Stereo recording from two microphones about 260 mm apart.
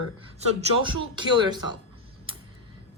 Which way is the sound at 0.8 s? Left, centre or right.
Centre.